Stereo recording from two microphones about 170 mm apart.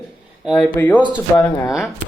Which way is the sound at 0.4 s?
Centre (ahead or behind).